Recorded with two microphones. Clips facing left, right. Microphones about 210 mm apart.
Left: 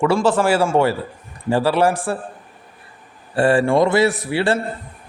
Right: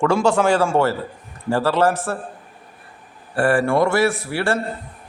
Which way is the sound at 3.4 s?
25° left (ahead or behind).